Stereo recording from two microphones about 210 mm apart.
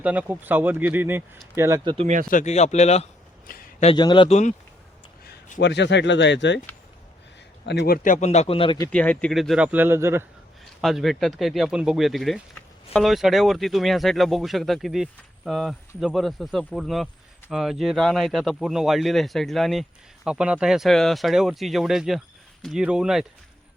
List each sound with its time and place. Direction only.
0.0 s speech: 5° right (ahead or behind); by 2.0 s 20° right (ahead or behind)
2.3 s speech: 35° left (ahead or behind)
3.5 s a sound: 35° left (ahead or behind)
3.9 s a man's voice: 20° left (ahead or behind)
5.2 s speech: 45° left (ahead or behind)
7.6 s a man's voice: 55° left (ahead or behind)
8.0 s a man's voice: 35° left (ahead or behind)
8.9 s speech: 5° left (ahead or behind); by 10.2 s 10° right (ahead or behind)
10.8 s speech: centre (ahead or behind)